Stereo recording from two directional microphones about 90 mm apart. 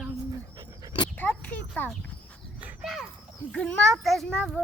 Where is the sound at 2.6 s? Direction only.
20° right (ahead or behind).